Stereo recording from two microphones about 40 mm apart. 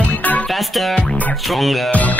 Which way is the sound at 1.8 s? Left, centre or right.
Left.